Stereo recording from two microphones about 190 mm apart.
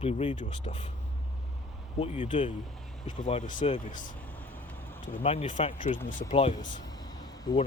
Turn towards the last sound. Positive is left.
turn(degrees=20)  # may be behind; listen again after turning